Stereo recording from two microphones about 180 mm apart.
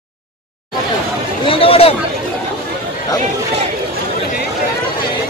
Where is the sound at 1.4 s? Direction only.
30° left (ahead or behind).